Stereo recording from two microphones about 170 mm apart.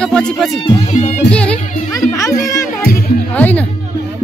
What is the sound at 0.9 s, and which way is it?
Music, 45° left (ahead or behind).